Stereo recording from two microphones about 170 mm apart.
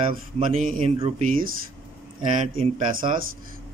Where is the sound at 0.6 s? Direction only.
50° right (ahead or behind).